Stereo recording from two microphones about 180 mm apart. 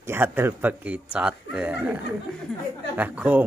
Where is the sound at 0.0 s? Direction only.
10° right (ahead or behind).